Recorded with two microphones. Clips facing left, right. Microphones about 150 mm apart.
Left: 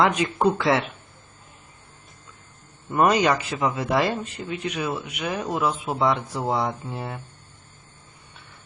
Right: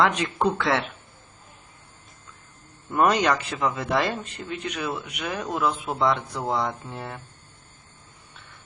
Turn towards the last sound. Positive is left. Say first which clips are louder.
# left 3 dB
turn(degrees=5)  # may be behind; listen again after turning